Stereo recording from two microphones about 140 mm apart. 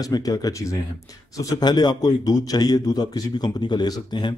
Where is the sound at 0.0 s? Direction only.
25° left (ahead or behind).